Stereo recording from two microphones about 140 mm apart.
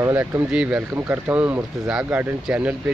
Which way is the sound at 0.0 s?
20° right (ahead or behind).